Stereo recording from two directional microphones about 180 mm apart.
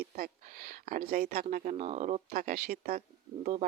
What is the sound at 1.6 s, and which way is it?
Speech, 40° right (ahead or behind).